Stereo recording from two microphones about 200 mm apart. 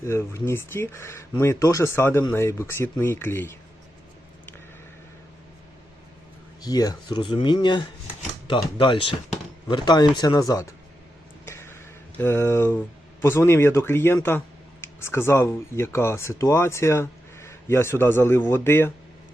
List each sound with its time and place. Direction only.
0.0 s speech: 15° left (ahead or behind)
6.7 s speech: 20° left (ahead or behind)
11.4 s a sound: 15° left (ahead or behind)
13.2 s speech: 10° left (ahead or behind)